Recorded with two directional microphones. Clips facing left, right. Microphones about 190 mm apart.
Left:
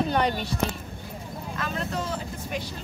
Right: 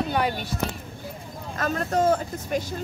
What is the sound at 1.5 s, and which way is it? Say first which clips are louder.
Speech: right 7 dB; 45° right (ahead or behind).